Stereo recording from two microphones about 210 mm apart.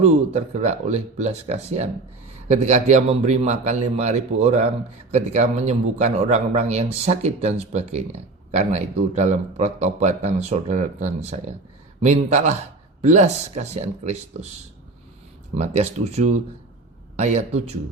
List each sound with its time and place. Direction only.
0.0 s a man's voice: 30° right (ahead or behind)
15.5 s a man's voice: 30° right (ahead or behind)